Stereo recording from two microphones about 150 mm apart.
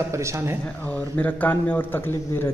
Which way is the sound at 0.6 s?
10° left (ahead or behind).